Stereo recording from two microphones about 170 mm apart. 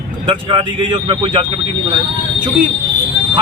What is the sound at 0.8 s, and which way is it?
Speech, 30° right (ahead or behind).